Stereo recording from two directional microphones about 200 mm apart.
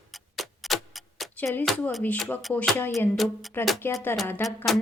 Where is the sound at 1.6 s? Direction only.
5° left (ahead or behind).